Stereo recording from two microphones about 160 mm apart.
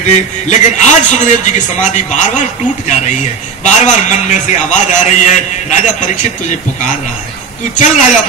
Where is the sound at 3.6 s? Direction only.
50° left (ahead or behind).